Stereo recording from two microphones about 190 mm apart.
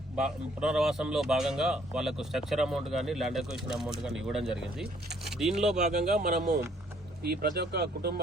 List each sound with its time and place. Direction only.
0.2 s speech: 5° right (ahead or behind)
5.7 s speech: 35° right (ahead or behind); by 8.2 s 55° right (ahead or behind)